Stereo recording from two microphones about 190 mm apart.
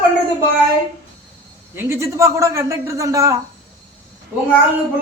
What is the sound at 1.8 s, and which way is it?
A man's voice, 15° right (ahead or behind).